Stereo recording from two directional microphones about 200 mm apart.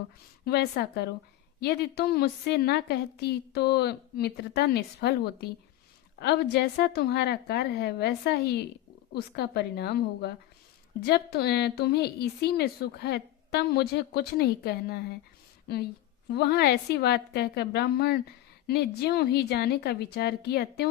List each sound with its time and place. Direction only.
0.4 s a woman's voice: 55° left (ahead or behind)
16.3 s a woman's voice: 55° left (ahead or behind)